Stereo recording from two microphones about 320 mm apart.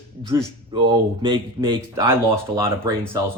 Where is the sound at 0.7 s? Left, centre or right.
Centre.